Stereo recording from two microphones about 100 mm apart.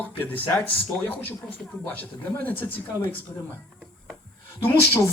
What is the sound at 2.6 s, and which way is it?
Speech, 15° left (ahead or behind).